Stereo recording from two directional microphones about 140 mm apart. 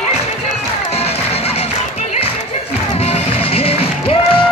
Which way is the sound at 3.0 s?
45° left (ahead or behind).